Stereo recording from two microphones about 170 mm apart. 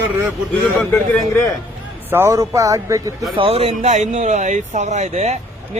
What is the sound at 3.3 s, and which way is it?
Speech, 30° right (ahead or behind).